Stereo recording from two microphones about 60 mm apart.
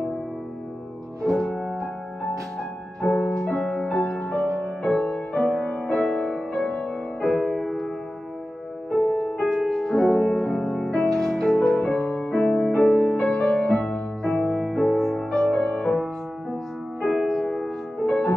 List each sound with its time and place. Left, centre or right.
1.2 s music: centre
1.5 s music: centre
8.9 s music: centre
9.4 s music: centre
15.5 s music: left
17.0 s music: centre
18.0 s music: centre